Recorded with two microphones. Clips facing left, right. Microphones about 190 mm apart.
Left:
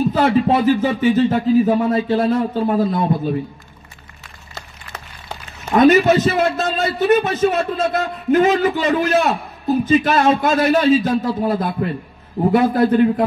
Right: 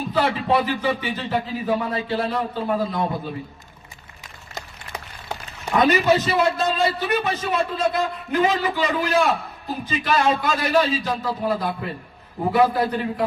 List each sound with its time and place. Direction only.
0.1 s a man's voice: 45° left (ahead or behind)
4.6 s a sound: 15° right (ahead or behind)
5.8 s a man's voice: 45° left (ahead or behind)